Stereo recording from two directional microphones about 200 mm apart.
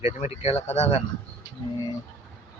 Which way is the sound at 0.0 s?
30° left (ahead or behind).